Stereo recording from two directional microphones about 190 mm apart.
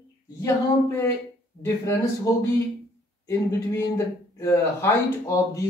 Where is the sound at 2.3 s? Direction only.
15° left (ahead or behind).